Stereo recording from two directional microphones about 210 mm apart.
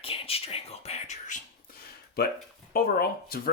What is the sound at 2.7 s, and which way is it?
Speech, 45° left (ahead or behind).